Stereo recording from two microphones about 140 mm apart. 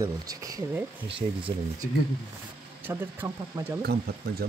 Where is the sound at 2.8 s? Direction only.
15° right (ahead or behind).